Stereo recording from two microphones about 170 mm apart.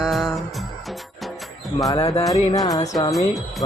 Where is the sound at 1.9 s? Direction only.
35° left (ahead or behind).